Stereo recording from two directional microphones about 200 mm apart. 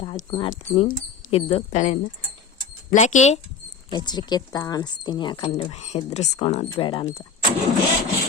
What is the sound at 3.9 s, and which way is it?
Speech, 20° left (ahead or behind).